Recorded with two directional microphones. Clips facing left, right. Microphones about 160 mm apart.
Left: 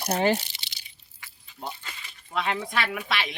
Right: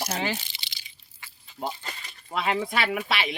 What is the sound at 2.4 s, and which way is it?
Speech, 5° right (ahead or behind).